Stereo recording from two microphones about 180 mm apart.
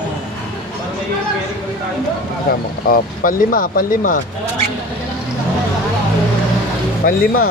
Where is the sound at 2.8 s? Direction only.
55° left (ahead or behind).